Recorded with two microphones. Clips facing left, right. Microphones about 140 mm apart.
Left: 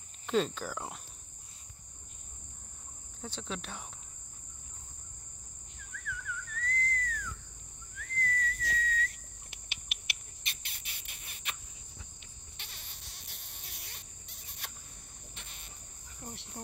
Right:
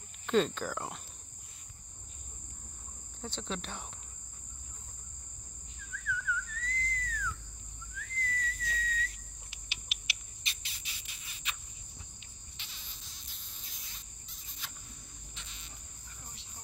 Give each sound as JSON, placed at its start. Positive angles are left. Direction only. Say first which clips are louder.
{"t": 0.3, "sound": "cricket", "louder": "right 2 dB", "side_deg": 5}
{"t": 3.2, "sound": "cricket", "louder": "right 1 dB", "side_deg": 5}
{"t": 6.0, "sound": "a sound", "louder": "right 6 dB", "side_deg": 50}
{"t": 7.9, "sound": "whistle", "louder": "left 3 dB", "side_deg": 55}
{"t": 12.5, "sound": "insect", "louder": "left 1 dB", "side_deg": 60}
{"t": 15.3, "sound": "cricket", "louder": "left 1 dB", "side_deg": 55}